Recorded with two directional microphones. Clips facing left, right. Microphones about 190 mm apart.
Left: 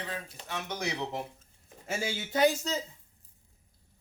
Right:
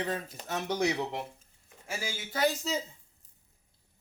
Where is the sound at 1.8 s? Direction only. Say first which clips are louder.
Left 4 dB; 25° left (ahead or behind).